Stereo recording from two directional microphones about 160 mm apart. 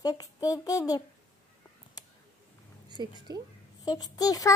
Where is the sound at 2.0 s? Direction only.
20° left (ahead or behind).